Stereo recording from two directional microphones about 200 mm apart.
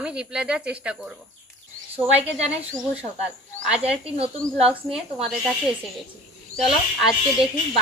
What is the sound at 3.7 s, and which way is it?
Speech, 5° right (ahead or behind).